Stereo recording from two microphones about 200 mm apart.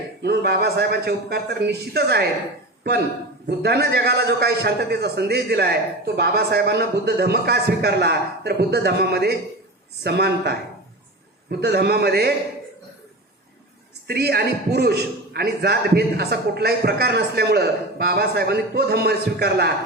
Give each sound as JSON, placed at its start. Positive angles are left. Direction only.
{"t": 0.2, "sound": "a man's voice", "side_deg": -55}
{"t": 3.6, "sound": "a man's voice", "side_deg": -55}
{"t": 11.6, "sound": "a man's voice", "side_deg": -55}
{"t": 14.1, "sound": "a man's voice", "side_deg": -55}